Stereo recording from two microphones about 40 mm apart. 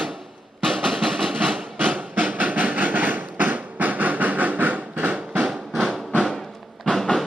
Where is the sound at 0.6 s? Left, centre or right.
Centre.